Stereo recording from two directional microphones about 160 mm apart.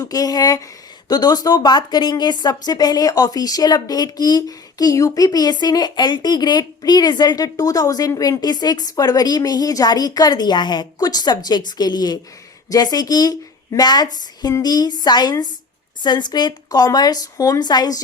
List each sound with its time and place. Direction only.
0.0 s a woman's voice: 25° left (ahead or behind)